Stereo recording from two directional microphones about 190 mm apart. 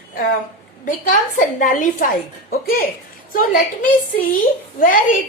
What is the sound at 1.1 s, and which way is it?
A woman's voice, 40° left (ahead or behind).